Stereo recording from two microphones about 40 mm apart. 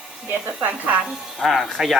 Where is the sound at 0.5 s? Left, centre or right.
Right.